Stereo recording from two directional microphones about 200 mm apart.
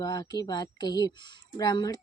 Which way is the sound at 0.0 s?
20° left (ahead or behind).